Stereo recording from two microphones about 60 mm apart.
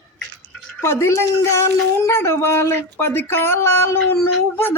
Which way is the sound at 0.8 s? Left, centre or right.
Left.